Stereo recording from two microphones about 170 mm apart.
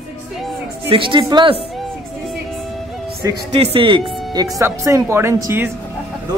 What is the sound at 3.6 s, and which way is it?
Speech, 30° right (ahead or behind).